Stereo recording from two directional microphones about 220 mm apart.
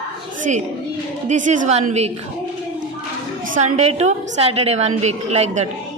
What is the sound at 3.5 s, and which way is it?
A woman's voice, 30° right (ahead or behind).